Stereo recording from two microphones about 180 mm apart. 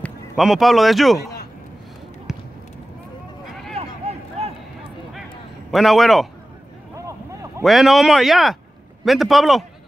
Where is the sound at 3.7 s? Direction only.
35° right (ahead or behind).